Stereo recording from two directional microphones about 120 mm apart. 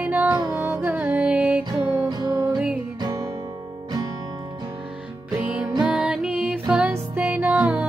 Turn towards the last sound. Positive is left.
turn(degrees=-10)  # may be behind; listen again after turning